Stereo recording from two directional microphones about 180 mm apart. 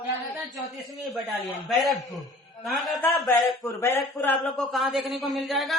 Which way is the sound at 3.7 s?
15° left (ahead or behind).